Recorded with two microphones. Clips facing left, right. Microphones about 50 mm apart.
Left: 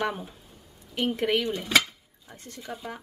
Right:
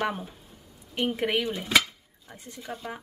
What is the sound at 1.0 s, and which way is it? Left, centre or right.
A woman's voice, centre.